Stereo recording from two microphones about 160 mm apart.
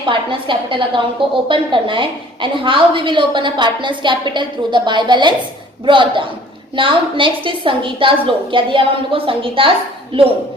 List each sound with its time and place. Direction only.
0.0 s a woman's voice: 30° right (ahead or behind)